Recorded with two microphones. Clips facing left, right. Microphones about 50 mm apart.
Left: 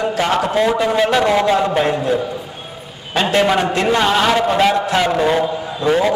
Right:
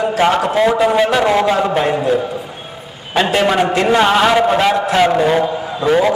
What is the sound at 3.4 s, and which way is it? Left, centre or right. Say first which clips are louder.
A man's voice: even; centre.